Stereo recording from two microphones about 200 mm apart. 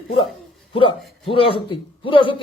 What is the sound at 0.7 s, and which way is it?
A man's voice, 25° left (ahead or behind).